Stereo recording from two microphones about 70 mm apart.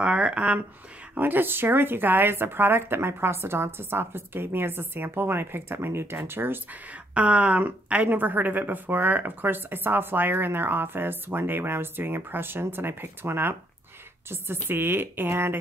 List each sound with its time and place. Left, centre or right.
0.0 s speech: centre
1.1 s a woman's voice: right